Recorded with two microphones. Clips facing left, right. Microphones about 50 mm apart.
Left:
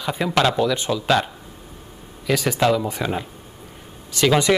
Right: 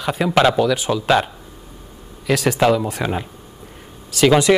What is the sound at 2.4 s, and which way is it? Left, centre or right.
Speech, centre.